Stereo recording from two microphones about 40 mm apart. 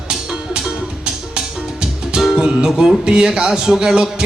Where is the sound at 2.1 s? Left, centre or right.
Centre.